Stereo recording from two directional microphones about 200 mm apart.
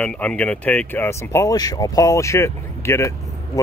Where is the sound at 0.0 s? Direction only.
5° left (ahead or behind).